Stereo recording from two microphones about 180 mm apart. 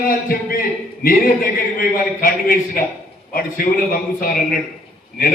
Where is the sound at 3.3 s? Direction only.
50° left (ahead or behind).